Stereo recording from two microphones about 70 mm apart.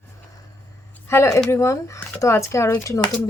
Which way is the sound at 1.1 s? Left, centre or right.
Left.